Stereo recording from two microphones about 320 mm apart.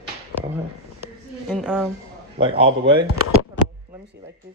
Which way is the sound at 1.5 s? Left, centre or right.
Centre.